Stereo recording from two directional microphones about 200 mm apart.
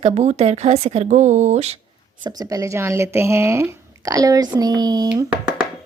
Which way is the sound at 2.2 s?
20° right (ahead or behind).